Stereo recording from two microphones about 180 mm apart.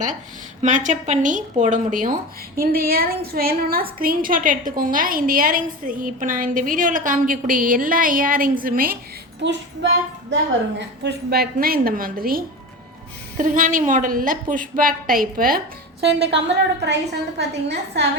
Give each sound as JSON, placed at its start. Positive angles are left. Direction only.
{"t": 0.6, "sound": "a woman's voice", "side_deg": -45}
{"t": 9.4, "sound": "child singing", "side_deg": -80}
{"t": 10.8, "sound": "a woman's voice", "side_deg": -70}